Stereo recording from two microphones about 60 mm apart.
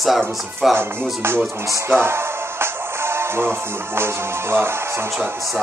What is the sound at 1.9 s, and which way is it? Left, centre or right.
Music, right.